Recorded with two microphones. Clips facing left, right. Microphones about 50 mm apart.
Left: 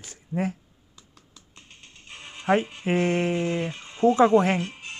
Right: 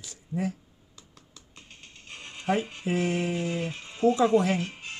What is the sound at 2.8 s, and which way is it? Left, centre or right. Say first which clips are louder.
Speech: left 4 dB; left.